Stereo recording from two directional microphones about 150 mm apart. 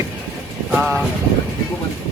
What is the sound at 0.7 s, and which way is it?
Vehicle, 10° right (ahead or behind).